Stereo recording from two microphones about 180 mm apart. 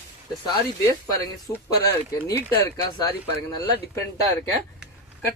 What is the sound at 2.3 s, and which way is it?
Speech, 10° left (ahead or behind).